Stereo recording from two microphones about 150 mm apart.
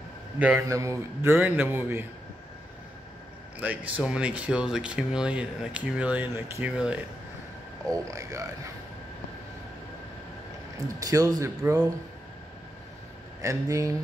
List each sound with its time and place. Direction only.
0.4 s speech: 10° right (ahead or behind)
0.7 s speech: 20° right (ahead or behind)
3.5 s speech: 10° right (ahead or behind)
7.9 s a man's voice: 20° right (ahead or behind)
11.0 s a man's voice: 25° right (ahead or behind)
13.4 s a man's voice: 20° right (ahead or behind)